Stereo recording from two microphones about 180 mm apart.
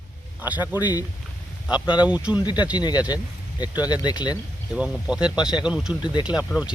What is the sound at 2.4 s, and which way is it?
Speech, 25° left (ahead or behind).